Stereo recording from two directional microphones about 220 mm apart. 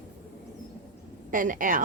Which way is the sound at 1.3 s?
40° right (ahead or behind).